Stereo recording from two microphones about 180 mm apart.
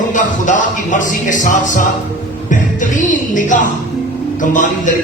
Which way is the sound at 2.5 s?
45° left (ahead or behind).